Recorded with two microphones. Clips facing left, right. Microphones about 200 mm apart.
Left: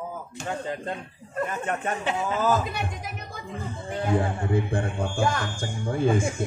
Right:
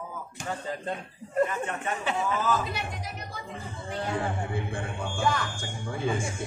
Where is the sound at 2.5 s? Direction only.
50° left (ahead or behind).